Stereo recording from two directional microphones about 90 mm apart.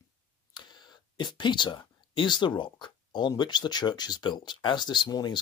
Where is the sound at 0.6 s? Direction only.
55° left (ahead or behind).